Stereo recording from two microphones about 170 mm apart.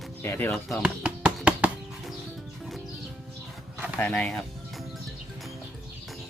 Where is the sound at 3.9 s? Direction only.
10° left (ahead or behind).